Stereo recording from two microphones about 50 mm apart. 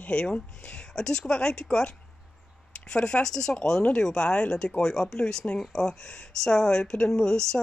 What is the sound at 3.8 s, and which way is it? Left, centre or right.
Speech, left.